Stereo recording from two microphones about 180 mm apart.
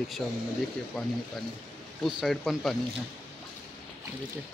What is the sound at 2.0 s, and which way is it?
Speech, centre (ahead or behind).